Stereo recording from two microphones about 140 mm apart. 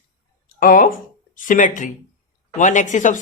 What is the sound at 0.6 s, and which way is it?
Speech, 85° left.